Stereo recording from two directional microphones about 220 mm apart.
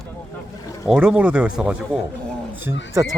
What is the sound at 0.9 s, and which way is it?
Speech, 5° right (ahead or behind).